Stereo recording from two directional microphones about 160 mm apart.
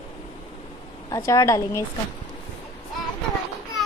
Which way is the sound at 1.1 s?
20° left (ahead or behind).